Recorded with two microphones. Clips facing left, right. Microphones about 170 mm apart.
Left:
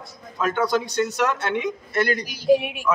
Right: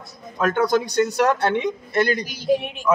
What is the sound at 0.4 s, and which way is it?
Speech, 50° right (ahead or behind).